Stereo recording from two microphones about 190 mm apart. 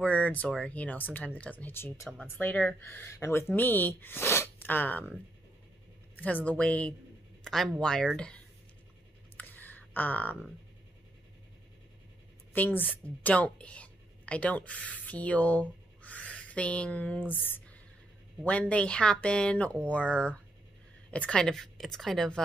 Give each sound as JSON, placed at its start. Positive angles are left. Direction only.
{"t": 0.0, "sound": "speech", "side_deg": 10}
{"t": 6.1, "sound": "speech", "side_deg": 10}
{"t": 9.4, "sound": "a sound", "side_deg": 10}
{"t": 12.5, "sound": "a woman's voice", "side_deg": 10}